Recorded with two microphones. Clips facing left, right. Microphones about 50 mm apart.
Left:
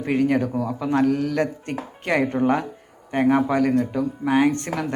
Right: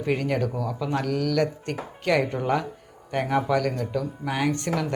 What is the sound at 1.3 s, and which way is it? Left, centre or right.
Speech, left.